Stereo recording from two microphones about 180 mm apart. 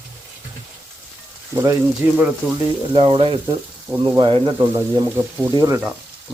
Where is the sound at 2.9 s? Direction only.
30° right (ahead or behind).